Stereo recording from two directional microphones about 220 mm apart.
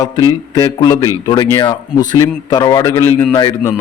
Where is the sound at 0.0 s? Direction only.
15° left (ahead or behind).